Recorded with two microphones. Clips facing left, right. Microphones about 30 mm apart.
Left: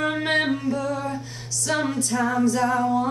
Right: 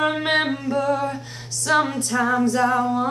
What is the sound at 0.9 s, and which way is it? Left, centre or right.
Female singing, right.